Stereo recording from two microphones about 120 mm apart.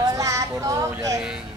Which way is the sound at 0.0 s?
30° right (ahead or behind).